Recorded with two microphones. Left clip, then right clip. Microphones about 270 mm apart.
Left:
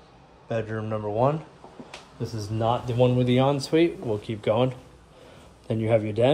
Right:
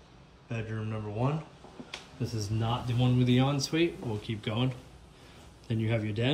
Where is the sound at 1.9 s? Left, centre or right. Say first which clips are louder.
Left 3 dB; centre.